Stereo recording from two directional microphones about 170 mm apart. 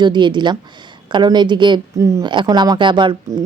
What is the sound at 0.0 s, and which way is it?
Speech, 25° right (ahead or behind).